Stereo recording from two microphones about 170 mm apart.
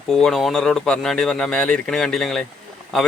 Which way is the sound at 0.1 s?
5° left (ahead or behind).